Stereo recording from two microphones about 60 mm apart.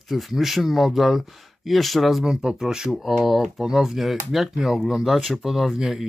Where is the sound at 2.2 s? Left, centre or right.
Centre.